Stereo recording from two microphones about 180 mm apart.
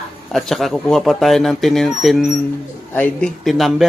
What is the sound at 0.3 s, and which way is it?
A man's voice, centre (ahead or behind).